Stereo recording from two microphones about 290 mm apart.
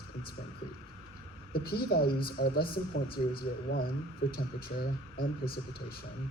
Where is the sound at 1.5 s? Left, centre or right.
Left.